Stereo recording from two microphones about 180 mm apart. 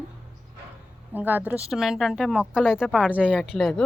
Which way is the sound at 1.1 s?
10° right (ahead or behind).